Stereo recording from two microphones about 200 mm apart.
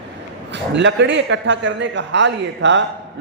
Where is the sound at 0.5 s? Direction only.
65° right (ahead or behind).